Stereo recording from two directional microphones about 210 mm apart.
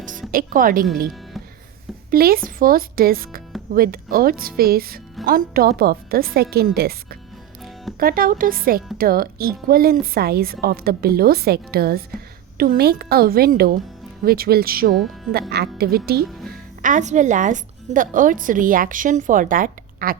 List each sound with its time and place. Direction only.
0.3 s speech: 40° right (ahead or behind)
2.0 s speech: 45° right (ahead or behind)